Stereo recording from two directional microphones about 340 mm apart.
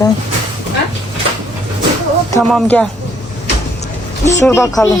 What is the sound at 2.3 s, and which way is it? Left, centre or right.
Speech, centre.